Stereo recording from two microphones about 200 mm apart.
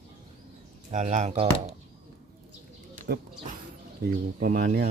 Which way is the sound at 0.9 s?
40° right (ahead or behind).